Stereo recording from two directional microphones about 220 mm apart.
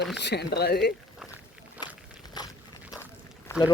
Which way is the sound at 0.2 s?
50° left (ahead or behind).